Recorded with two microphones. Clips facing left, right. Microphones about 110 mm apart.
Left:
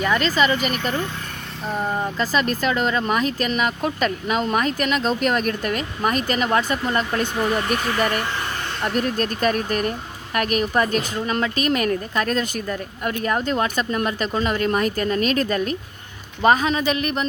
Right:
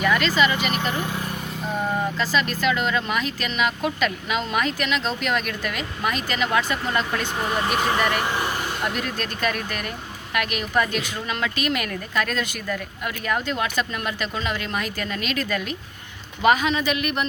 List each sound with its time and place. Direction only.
0.0 s speech: 35° left (ahead or behind)
1.7 s speech: centre (ahead or behind)
2.1 s speech: 40° left (ahead or behind)
7.8 s speech: 20° right (ahead or behind)
9.0 s speech: 40° left (ahead or behind)